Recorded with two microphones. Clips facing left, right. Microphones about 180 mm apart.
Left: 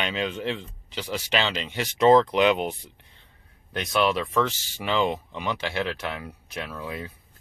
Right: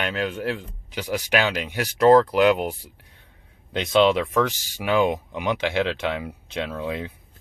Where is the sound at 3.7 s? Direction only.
20° right (ahead or behind).